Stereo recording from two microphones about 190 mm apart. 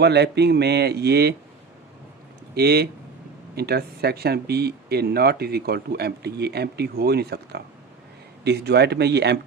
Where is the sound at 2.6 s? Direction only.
55° right (ahead or behind).